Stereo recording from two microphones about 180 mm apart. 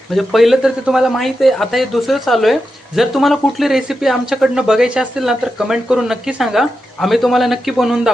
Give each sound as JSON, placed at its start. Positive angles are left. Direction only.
{"t": 0.1, "sound": "speech", "side_deg": 0}